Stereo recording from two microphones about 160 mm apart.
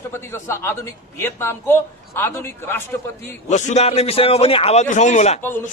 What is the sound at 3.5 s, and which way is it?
A man's voice, 45° left (ahead or behind).